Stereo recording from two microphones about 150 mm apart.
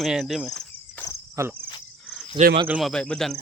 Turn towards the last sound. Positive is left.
turn(degrees=5)  # may be behind; listen again after turning